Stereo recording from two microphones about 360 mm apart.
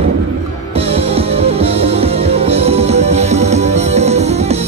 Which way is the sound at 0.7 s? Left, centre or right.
Centre.